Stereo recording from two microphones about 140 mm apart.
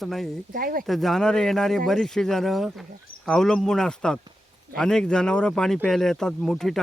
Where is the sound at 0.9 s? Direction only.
Centre (ahead or behind).